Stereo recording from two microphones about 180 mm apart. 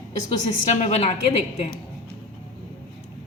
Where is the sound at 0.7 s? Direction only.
35° left (ahead or behind).